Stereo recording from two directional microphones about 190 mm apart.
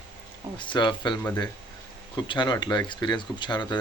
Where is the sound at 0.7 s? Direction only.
25° left (ahead or behind).